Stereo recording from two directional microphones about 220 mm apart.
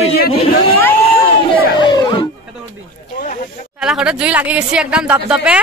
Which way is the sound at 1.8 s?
20° left (ahead or behind).